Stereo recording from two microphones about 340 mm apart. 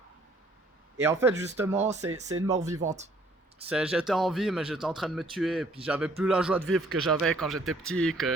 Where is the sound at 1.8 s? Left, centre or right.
Centre.